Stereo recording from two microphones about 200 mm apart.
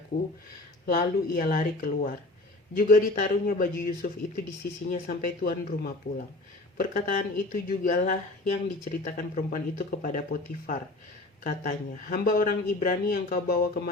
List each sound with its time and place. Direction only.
0.9 s speech: 45° left (ahead or behind)
11.4 s speech: 40° left (ahead or behind)